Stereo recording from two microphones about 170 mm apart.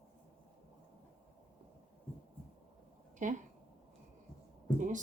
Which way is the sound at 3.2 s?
50° right (ahead or behind).